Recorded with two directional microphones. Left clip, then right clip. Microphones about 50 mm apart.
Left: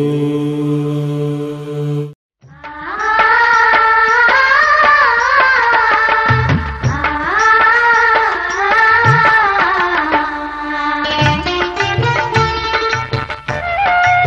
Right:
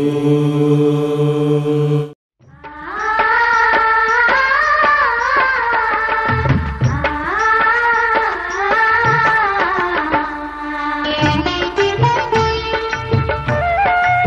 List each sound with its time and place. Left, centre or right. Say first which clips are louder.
3.1 s music: left 3 dB; left
13.7 s music: left 2 dB; left